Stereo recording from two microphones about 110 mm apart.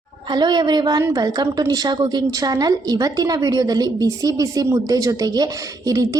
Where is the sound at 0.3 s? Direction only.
40° right (ahead or behind).